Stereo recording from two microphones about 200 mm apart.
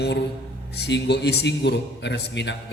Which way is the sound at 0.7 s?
60° left (ahead or behind).